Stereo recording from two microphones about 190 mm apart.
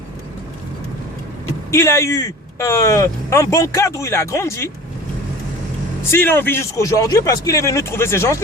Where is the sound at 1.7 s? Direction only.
15° left (ahead or behind).